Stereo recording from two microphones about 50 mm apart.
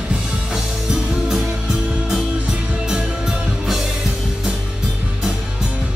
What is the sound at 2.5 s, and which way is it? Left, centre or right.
Music, centre.